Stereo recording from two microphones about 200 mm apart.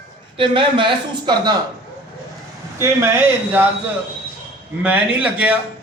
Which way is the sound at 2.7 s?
15° right (ahead or behind).